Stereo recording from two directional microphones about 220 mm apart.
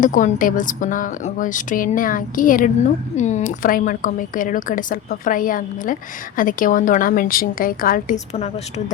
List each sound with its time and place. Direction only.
0.0 s speech: 35° left (ahead or behind)